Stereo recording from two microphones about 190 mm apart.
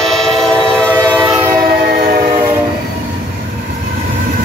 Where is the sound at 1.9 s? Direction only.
50° right (ahead or behind).